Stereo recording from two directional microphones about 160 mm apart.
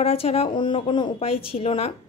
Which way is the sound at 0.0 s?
40° left (ahead or behind).